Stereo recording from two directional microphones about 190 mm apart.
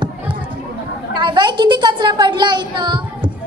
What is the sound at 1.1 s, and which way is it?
A woman's voice, 25° right (ahead or behind).